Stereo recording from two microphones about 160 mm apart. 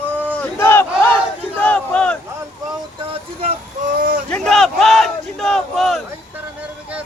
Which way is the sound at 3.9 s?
60° right (ahead or behind).